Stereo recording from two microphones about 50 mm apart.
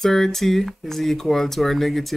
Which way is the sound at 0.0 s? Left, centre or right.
Centre.